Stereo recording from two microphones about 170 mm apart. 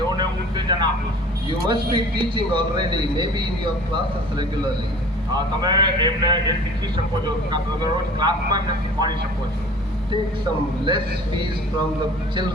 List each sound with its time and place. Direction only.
0.2 s vehicle: 25° right (ahead or behind)
1.6 s speech: 25° right (ahead or behind)
5.3 s speech: 25° right (ahead or behind)
10.8 s speech: 25° right (ahead or behind)